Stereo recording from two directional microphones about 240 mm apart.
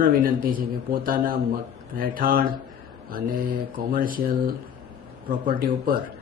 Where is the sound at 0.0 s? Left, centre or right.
Right.